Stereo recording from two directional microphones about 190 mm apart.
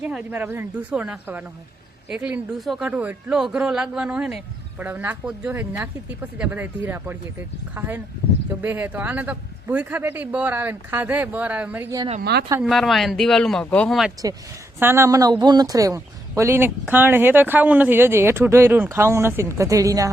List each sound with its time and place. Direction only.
0.0 s a man's voice: 10° right (ahead or behind)
11.9 s speech: 30° right (ahead or behind)
12.2 s speech: 60° right (ahead or behind)
12.6 s speech: centre (ahead or behind)
14.8 s a man's voice: 10° right (ahead or behind)